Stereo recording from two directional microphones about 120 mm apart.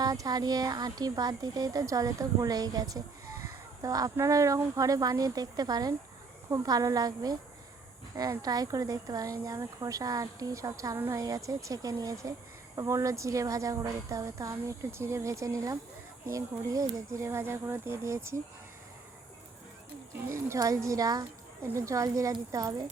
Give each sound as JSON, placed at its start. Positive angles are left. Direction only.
{"t": 0.0, "sound": "speech", "side_deg": -30}
{"t": 20.1, "sound": "speech", "side_deg": -25}